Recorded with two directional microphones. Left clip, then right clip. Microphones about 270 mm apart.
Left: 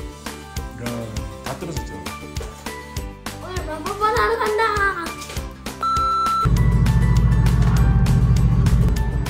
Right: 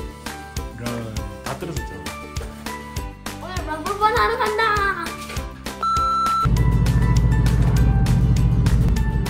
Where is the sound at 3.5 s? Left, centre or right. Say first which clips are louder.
Right 2 dB; centre.